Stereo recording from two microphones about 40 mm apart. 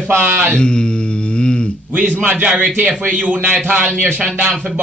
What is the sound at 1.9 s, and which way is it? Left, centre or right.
A man's voice, right.